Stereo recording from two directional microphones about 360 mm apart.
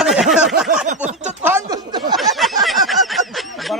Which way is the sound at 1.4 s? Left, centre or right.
Centre.